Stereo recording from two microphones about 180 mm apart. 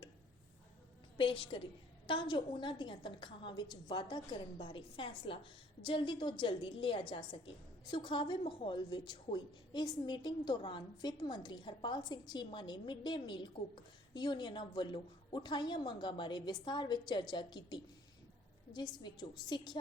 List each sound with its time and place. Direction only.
1.2 s a woman's voice: 30° left (ahead or behind)